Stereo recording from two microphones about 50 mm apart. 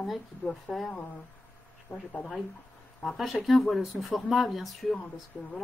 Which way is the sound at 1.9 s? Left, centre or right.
Left.